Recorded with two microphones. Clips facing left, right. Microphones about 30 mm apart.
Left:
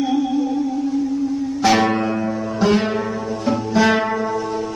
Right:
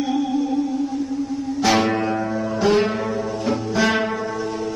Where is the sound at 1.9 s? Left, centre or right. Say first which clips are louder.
Left 1 dB; centre.